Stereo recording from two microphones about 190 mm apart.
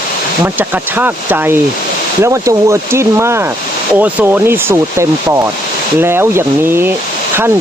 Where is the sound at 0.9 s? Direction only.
10° right (ahead or behind).